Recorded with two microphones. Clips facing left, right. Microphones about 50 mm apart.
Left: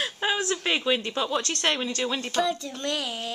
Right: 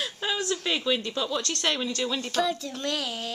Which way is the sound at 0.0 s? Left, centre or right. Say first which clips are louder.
Left 3 dB; left.